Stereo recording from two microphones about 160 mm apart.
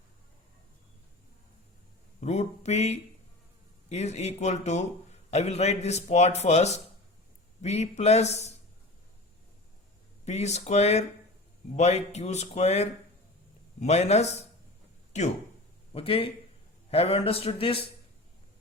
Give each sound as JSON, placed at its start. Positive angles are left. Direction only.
{"t": 2.2, "sound": "a man's voice", "side_deg": 45}
{"t": 10.2, "sound": "a man's voice", "side_deg": 45}
{"t": 16.0, "sound": "speech", "side_deg": 35}